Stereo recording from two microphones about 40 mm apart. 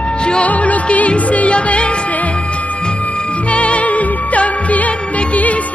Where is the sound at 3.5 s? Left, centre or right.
Left.